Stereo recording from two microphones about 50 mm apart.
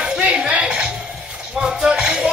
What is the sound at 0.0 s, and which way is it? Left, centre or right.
Music, centre.